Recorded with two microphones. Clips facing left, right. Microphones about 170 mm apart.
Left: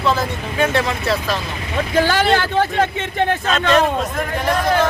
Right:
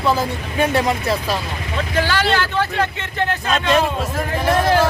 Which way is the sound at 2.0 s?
50° left (ahead or behind).